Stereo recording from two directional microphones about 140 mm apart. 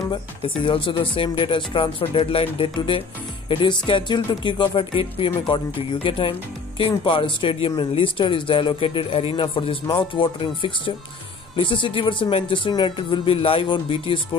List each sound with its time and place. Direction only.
0.7 s speech: 35° left (ahead or behind)